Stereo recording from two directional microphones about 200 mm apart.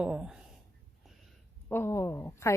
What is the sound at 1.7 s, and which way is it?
Speech, 15° left (ahead or behind).